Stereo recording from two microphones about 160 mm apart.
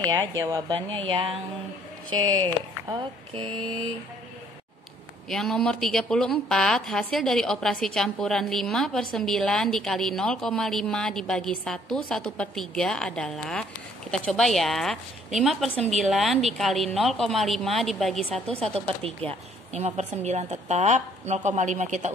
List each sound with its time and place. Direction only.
0.4 s speech: 20° right (ahead or behind)
1.0 s a sound: 35° right (ahead or behind)
2.0 s speech: 25° right (ahead or behind)
5.3 s a woman's voice: centre (ahead or behind)
16.0 s a woman's voice: centre (ahead or behind)
19.0 s a woman's voice: 40° right (ahead or behind)